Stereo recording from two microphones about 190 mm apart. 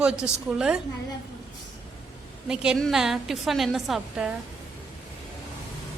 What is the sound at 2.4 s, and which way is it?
A woman's voice, 5° right (ahead or behind).